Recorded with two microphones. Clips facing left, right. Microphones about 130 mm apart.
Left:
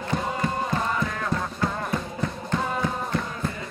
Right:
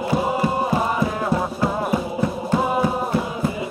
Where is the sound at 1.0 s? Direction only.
25° right (ahead or behind).